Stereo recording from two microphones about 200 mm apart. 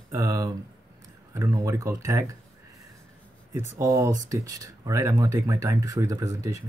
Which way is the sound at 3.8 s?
15° right (ahead or behind).